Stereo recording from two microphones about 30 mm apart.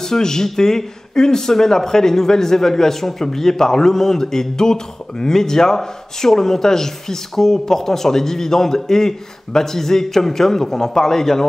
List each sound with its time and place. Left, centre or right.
0.0 s speech: centre